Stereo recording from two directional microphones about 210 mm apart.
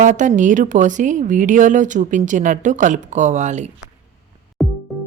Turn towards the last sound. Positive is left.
turn(degrees=0)  # may be behind; listen again after turning